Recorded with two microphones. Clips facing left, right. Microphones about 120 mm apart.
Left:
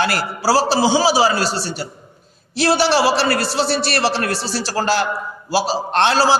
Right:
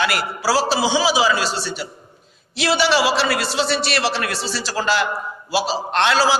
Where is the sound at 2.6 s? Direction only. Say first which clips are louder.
Left 2 dB; 40° left (ahead or behind).